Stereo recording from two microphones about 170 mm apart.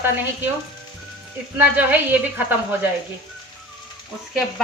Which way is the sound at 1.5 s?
10° right (ahead or behind).